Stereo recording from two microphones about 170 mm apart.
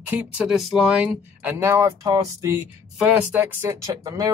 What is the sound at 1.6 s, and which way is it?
Speech, 15° right (ahead or behind).